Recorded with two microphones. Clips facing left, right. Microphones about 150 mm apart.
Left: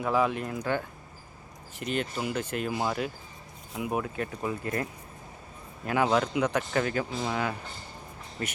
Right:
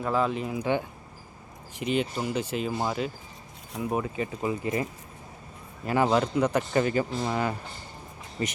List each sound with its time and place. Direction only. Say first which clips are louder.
0.0 s speech: even; 5° left (ahead or behind)
1.8 s speech: right 4 dB; 45° left (ahead or behind)
2.3 s speech: right 2 dB; 10° right (ahead or behind)
2.6 s speech: left 1 dB; centre (ahead or behind)
4.0 s speech: right 3 dB; centre (ahead or behind)